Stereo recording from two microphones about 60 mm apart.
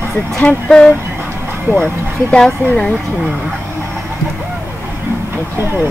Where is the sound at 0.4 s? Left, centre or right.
Centre.